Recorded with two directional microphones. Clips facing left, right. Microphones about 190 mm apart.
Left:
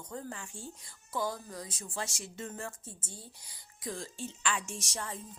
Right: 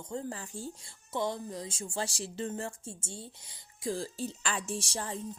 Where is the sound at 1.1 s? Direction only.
25° right (ahead or behind).